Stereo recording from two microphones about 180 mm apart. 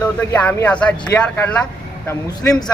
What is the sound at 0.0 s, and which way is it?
Speech, 10° left (ahead or behind).